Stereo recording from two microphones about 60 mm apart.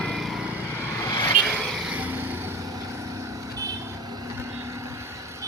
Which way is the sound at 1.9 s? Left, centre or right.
Right.